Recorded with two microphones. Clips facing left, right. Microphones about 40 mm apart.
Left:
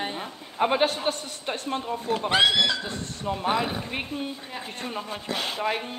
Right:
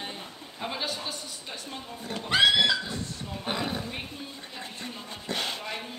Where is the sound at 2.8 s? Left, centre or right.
Left.